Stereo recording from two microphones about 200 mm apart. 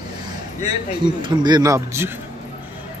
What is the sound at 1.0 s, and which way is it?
A man's voice, 20° right (ahead or behind).